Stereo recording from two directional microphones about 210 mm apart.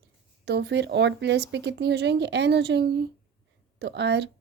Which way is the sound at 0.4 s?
55° right (ahead or behind).